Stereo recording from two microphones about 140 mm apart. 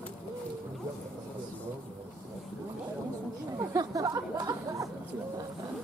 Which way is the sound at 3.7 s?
25° right (ahead or behind).